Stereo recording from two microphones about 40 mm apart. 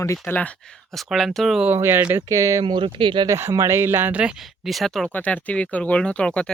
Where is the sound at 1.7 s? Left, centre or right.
Right.